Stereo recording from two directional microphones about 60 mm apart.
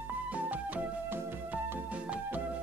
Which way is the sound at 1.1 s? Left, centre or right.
Right.